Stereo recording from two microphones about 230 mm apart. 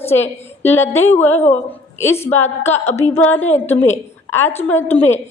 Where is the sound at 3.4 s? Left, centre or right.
Left.